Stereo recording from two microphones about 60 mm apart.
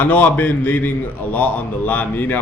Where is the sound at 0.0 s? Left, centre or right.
Left.